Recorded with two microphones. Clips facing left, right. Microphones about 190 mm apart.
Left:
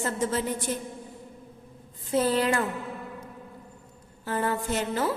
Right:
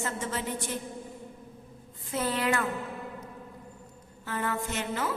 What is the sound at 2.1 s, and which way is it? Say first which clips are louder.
Speech: left 5 dB; 35° left (ahead or behind).